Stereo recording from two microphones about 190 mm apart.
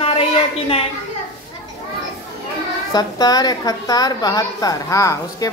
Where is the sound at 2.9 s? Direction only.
20° left (ahead or behind).